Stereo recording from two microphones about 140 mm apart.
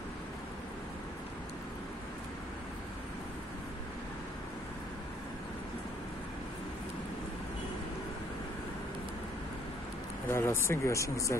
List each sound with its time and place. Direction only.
10.3 s speech: 20° left (ahead or behind)